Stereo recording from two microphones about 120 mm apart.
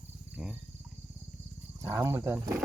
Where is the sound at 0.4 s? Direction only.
10° right (ahead or behind).